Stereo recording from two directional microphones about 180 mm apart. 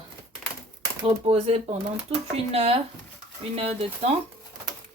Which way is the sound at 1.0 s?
35° right (ahead or behind).